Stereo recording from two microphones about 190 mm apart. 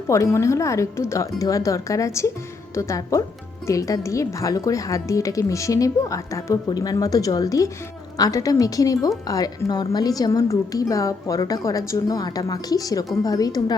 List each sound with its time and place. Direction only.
0.1 s a woman's voice: 15° left (ahead or behind)